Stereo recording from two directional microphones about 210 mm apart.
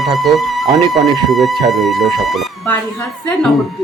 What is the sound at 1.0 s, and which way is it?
Speech, 30° right (ahead or behind).